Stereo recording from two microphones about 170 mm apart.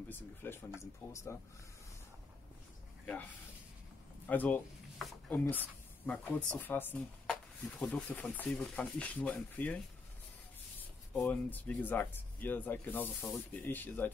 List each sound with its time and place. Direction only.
0.1 s speech: 10° left (ahead or behind)
4.3 s speech: 10° left (ahead or behind)
4.9 s a sound: centre (ahead or behind)
6.0 s speech: 10° left (ahead or behind)
11.1 s speech: 10° left (ahead or behind)